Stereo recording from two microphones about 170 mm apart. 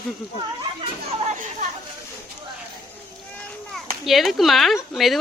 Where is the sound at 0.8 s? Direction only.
40° right (ahead or behind).